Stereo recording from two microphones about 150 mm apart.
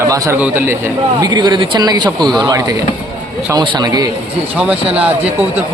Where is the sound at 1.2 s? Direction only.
30° right (ahead or behind).